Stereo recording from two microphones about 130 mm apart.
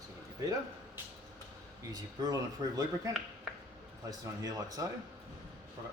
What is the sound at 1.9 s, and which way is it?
Speech, 30° right (ahead or behind).